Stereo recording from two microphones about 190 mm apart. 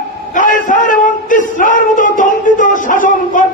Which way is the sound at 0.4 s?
45° left (ahead or behind).